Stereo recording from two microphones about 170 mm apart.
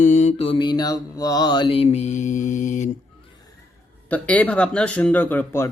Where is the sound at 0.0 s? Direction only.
45° left (ahead or behind).